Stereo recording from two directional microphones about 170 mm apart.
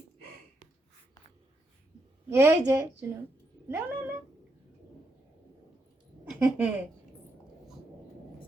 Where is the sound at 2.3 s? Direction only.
15° right (ahead or behind).